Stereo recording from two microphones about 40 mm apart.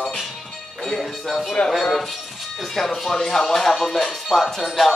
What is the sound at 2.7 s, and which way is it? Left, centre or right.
Speech, centre.